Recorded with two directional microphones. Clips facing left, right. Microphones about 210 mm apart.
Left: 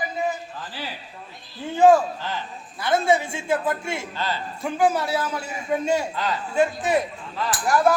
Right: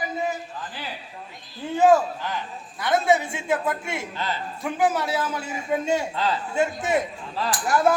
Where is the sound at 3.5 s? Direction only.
20° right (ahead or behind).